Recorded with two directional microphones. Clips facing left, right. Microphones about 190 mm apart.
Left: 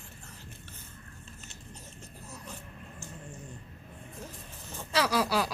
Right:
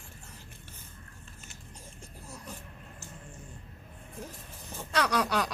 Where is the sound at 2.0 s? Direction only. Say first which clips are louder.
Right 2 dB; 10° right (ahead or behind).